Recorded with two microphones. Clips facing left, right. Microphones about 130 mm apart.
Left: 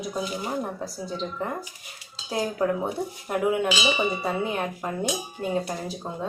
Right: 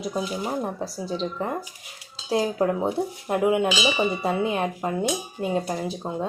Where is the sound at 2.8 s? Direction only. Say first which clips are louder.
Right 4 dB; 15° right (ahead or behind).